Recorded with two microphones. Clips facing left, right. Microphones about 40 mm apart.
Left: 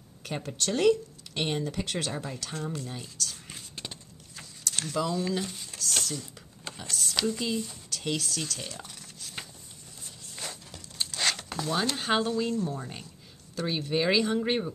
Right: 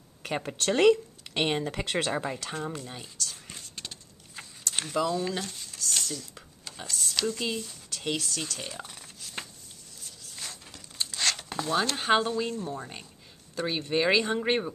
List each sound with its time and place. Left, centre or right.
0.2 s speech: right
2.2 s speech: right
2.5 s a sound: centre
4.4 s vehicle: centre
5.0 s speech: centre
5.4 s speech: centre
6.9 s speech: centre
7.9 s shuffling cards: centre
10.3 s a sound: centre
11.9 s speech: centre